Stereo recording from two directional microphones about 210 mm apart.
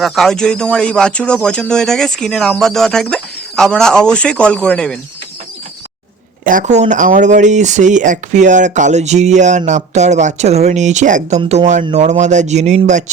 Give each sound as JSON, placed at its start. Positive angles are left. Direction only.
{"t": 0.0, "sound": "speech", "side_deg": 0}
{"t": 6.4, "sound": "speech", "side_deg": -40}